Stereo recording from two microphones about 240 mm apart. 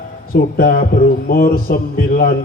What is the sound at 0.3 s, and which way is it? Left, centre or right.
A man's voice, left.